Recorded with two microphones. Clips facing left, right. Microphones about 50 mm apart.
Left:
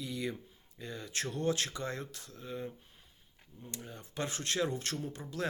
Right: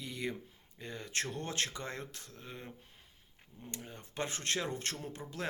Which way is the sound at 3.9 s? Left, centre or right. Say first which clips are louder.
Left 1 dB; right.